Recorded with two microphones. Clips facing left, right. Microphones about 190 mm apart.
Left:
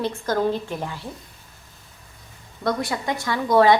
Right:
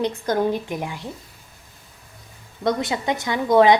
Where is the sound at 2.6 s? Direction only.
20° right (ahead or behind).